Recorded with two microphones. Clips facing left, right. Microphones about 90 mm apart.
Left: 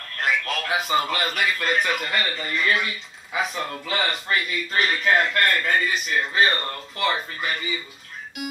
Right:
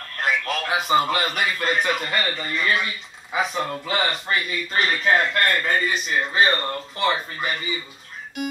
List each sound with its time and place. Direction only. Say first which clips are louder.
0.2 s speech: right 1 dB; 25° right (ahead or behind)